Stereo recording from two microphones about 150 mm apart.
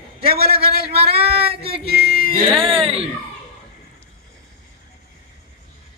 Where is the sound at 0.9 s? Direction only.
40° right (ahead or behind).